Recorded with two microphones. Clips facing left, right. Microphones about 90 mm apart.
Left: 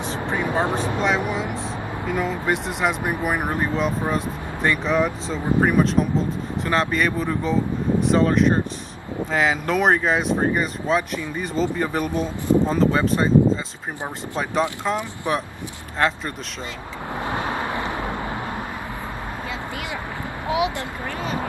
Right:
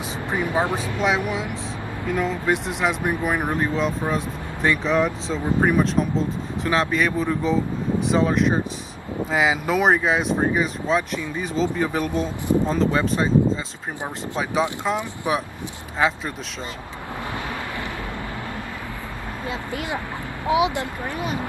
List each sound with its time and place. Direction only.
0.7 s speech: 35° left (ahead or behind)
1.0 s speech: centre (ahead or behind)
14.8 s speech: 5° right (ahead or behind)
20.4 s speech: 20° right (ahead or behind)